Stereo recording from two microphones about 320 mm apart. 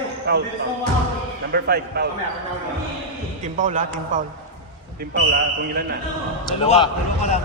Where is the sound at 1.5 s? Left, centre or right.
Right.